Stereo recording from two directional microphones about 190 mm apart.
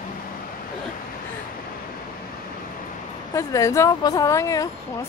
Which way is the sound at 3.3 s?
15° left (ahead or behind).